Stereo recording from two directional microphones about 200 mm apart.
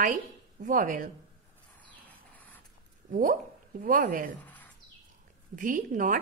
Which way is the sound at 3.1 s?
40° right (ahead or behind).